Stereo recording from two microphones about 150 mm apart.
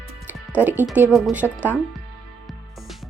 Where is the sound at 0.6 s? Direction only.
15° right (ahead or behind).